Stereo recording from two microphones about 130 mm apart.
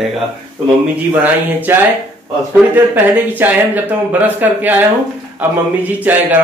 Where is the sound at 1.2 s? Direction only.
15° right (ahead or behind).